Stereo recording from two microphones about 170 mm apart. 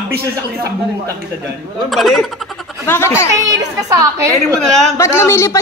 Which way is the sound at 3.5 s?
20° right (ahead or behind).